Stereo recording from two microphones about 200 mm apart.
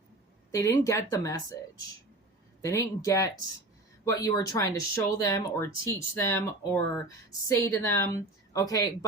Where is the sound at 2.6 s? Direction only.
15° left (ahead or behind).